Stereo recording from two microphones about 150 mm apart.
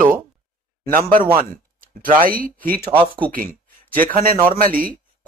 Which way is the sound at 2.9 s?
35° right (ahead or behind).